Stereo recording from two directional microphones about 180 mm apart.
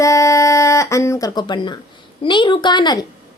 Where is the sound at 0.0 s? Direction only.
15° left (ahead or behind).